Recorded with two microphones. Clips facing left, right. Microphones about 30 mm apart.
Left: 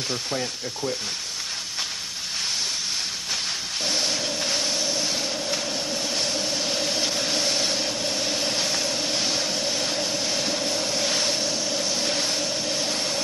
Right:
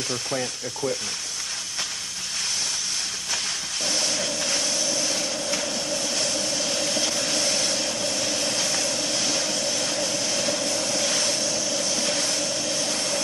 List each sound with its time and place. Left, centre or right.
0.3 s mechanisms: centre
3.8 s vehicle: left